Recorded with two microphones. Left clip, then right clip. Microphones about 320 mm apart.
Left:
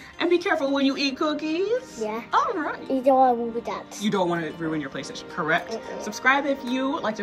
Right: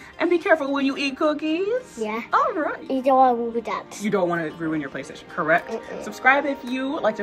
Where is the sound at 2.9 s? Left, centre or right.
Right.